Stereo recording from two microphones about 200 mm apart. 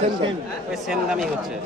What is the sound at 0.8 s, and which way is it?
Speech, centre (ahead or behind).